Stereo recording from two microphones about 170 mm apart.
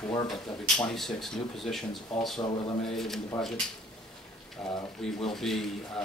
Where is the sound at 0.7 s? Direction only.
5° left (ahead or behind).